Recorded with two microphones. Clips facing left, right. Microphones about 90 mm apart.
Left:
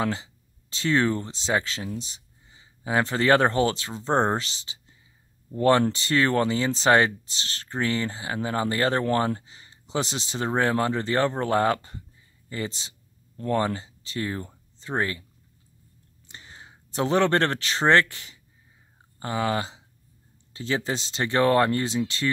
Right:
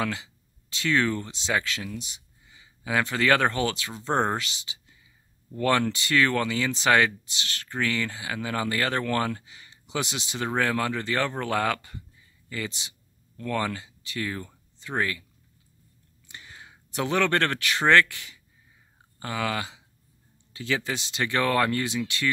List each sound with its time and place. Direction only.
0.0 s speech: 30° left (ahead or behind)
16.3 s speech: 30° left (ahead or behind)